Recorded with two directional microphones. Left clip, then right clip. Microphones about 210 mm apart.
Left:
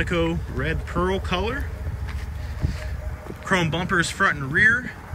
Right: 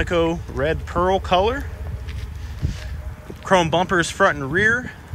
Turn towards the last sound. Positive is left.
turn(degrees=-10)  # may be behind; listen again after turning